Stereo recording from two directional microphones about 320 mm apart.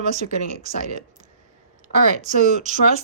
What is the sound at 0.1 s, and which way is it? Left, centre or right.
Speech, right.